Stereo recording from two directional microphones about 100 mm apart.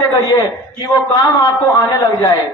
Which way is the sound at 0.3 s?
35° left (ahead or behind).